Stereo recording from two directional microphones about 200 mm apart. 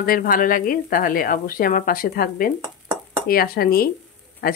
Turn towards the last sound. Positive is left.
turn(degrees=50)  # may be behind; listen again after turning